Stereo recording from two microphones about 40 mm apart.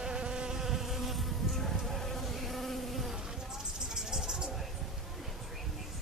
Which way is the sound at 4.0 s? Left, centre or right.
Centre.